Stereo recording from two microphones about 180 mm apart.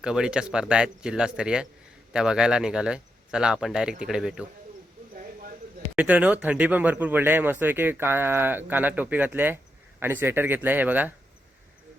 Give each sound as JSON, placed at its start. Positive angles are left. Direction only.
{"t": 0.0, "sound": "speech", "side_deg": -5}
{"t": 5.1, "sound": "a sound", "side_deg": -50}
{"t": 6.0, "sound": "speech", "side_deg": -5}